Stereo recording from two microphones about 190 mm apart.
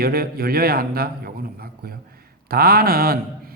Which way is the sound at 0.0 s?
55° right (ahead or behind).